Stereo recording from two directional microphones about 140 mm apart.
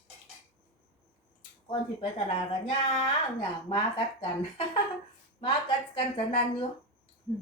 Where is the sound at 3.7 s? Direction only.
35° left (ahead or behind).